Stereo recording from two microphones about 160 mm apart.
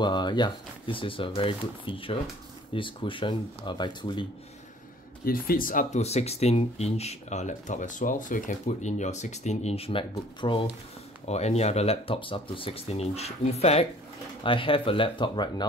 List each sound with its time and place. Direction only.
0.0 s speech: 30° left (ahead or behind)
5.2 s speech: 65° left (ahead or behind); by 15.6 s 25° left (ahead or behind)